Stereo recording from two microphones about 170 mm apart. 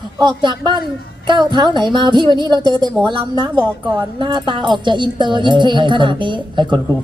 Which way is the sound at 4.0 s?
25° right (ahead or behind).